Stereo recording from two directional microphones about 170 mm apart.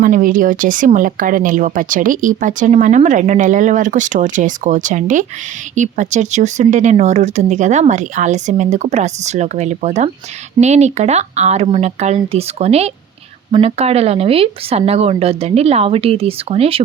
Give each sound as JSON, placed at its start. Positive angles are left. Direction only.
{"t": 0.0, "sound": "speech", "side_deg": -55}